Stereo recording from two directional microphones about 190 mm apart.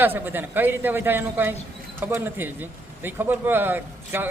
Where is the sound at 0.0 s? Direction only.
10° right (ahead or behind).